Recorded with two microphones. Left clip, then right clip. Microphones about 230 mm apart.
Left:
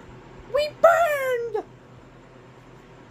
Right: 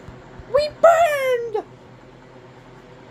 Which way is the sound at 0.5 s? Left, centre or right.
Centre.